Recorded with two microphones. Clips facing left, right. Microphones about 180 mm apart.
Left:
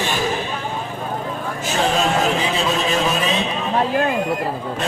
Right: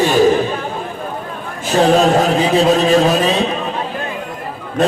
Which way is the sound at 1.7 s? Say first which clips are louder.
Right 8 dB; 35° right (ahead or behind).